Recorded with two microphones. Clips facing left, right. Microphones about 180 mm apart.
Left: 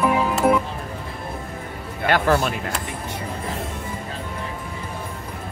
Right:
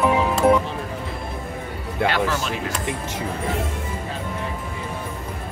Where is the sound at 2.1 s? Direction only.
50° left (ahead or behind).